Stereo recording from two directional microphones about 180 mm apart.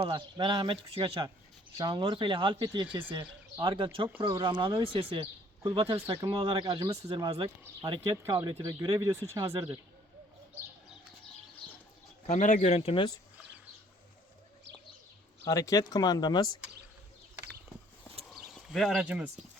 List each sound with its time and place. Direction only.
0.0 s speech: 25° right (ahead or behind)
12.2 s speech: 45° left (ahead or behind)
15.4 s speech: 20° left (ahead or behind)
18.3 s a sound: centre (ahead or behind)